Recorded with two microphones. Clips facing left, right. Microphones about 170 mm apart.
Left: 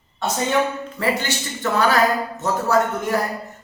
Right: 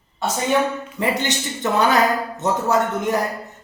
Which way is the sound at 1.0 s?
20° right (ahead or behind).